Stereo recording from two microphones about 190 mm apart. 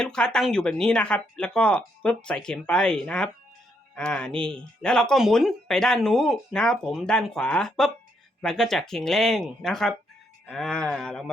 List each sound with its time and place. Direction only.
0.0 s speech: 5° left (ahead or behind)